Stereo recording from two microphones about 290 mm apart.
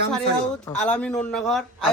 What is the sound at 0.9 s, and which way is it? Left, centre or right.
Speech, centre.